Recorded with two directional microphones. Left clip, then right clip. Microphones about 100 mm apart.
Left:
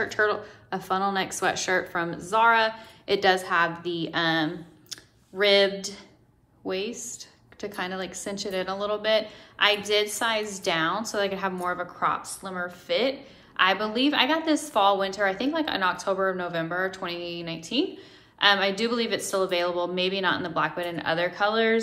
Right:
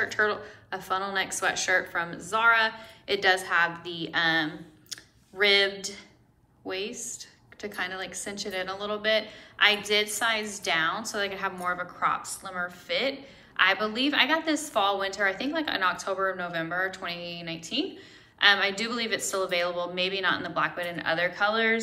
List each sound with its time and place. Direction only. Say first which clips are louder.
0.0 s a woman's voice: left 1 dB; 60° left (ahead or behind); by 7.2 s 80° left
7.6 s a woman's voice: left 1 dB; 60° left (ahead or behind)